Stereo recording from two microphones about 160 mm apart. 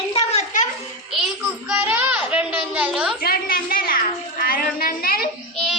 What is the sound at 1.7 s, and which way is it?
A child's voice, 10° right (ahead or behind).